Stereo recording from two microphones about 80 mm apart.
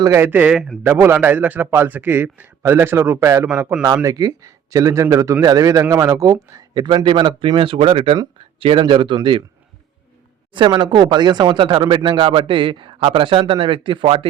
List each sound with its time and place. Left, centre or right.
0.2 s a man's voice: right
0.8 s a man's voice: right
3.9 s a man's voice: right
6.7 s speech: right
10.5 s speech: right